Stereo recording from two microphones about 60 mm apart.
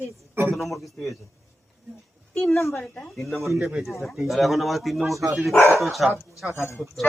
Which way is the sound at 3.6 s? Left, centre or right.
Centre.